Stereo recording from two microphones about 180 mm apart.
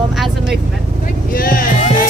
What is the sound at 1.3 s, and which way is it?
Speech, 55° left (ahead or behind).